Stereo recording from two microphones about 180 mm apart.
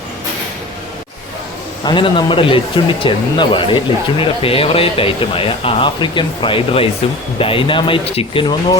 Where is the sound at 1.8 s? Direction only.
25° left (ahead or behind).